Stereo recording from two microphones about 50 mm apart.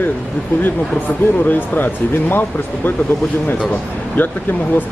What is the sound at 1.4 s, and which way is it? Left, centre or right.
Speech, left.